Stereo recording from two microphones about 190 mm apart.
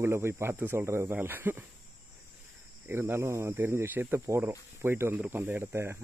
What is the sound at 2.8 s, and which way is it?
Speech, 10° right (ahead or behind).